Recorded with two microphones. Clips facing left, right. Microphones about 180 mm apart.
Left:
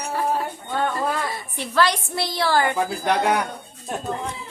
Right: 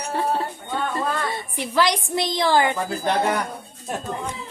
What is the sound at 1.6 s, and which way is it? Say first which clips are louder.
A woman's voice: even; 15° right (ahead or behind).